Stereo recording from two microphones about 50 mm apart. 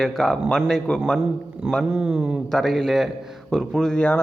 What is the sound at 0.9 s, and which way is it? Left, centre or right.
Speech, left.